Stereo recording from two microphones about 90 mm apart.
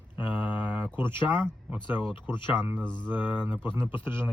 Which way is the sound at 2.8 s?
10° left (ahead or behind).